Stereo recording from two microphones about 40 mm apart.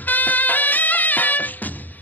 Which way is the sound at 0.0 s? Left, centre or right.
Left.